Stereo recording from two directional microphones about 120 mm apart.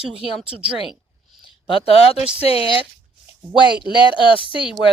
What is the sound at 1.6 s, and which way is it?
Speech, 50° left (ahead or behind).